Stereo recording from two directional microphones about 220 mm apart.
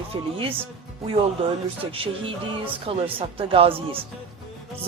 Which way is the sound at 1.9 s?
25° right (ahead or behind).